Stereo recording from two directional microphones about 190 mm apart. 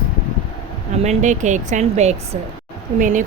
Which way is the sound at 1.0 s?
40° right (ahead or behind).